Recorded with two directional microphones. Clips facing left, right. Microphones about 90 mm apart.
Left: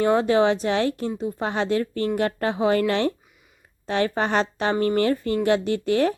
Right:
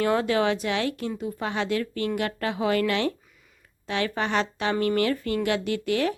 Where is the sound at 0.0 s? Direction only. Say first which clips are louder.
Left 4 dB; 25° left (ahead or behind).